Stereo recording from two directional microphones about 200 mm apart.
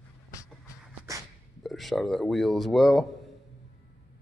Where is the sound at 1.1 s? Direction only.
15° right (ahead or behind).